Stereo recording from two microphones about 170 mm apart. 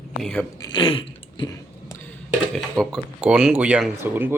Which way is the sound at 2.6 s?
Centre (ahead or behind).